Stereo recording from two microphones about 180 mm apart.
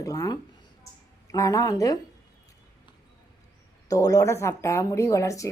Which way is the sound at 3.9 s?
20° left (ahead or behind).